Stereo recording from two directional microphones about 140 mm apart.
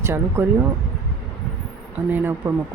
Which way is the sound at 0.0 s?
15° right (ahead or behind).